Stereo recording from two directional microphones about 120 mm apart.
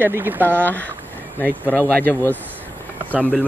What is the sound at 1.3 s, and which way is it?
Speech, 15° left (ahead or behind).